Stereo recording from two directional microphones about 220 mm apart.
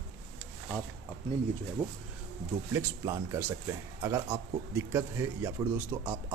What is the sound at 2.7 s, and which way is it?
Speech, 15° right (ahead or behind).